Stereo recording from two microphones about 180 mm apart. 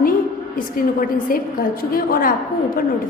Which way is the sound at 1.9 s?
50° left (ahead or behind).